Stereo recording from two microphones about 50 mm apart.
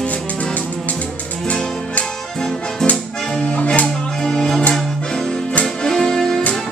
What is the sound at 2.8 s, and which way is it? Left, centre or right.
Accordion, centre.